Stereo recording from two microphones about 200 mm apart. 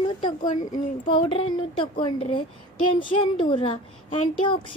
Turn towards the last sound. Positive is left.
turn(degrees=25)  # may be behind; listen again after turning